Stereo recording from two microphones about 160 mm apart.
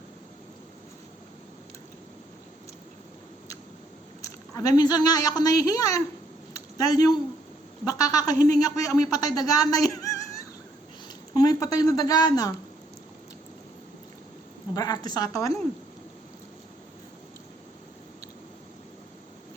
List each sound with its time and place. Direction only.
4.2 s a woman's voice: 20° left (ahead or behind)
6.5 s a sound: 20° left (ahead or behind)
7.9 s speech: 20° left (ahead or behind)
14.8 s speech: 25° left (ahead or behind)